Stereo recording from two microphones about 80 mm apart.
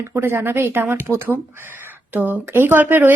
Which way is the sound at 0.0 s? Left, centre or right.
Right.